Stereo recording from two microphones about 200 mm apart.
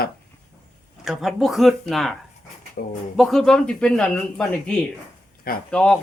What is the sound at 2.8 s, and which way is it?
Speech, 55° left (ahead or behind).